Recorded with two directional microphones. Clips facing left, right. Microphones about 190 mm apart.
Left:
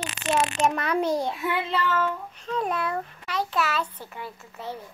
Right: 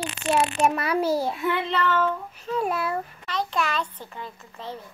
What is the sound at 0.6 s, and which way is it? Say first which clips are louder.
A child's voice: right 1 dB; 5° right (ahead or behind).